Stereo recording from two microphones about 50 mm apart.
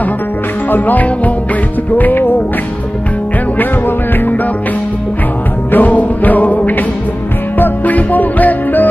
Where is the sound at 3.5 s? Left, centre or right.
Left.